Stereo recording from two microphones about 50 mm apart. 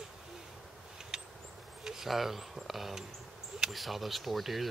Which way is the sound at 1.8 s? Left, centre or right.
Centre.